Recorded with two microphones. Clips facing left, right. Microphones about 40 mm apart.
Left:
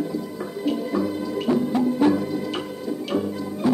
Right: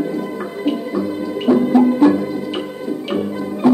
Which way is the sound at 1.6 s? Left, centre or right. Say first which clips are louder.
Right 8 dB; right.